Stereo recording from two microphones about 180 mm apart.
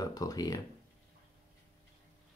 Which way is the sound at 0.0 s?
20° left (ahead or behind).